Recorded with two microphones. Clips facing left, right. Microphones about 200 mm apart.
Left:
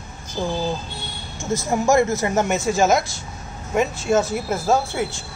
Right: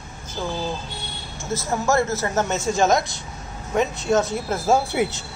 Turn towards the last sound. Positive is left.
turn(degrees=-15)  # may be behind; listen again after turning